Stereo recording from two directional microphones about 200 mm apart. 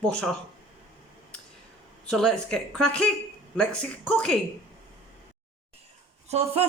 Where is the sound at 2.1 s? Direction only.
5° left (ahead or behind).